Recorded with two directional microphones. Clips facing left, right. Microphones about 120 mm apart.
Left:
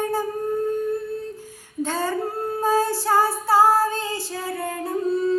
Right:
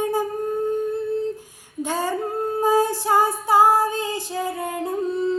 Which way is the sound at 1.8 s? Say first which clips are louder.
Even; 15° right (ahead or behind).